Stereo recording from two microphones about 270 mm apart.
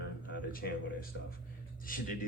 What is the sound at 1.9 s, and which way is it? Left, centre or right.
Speech, left.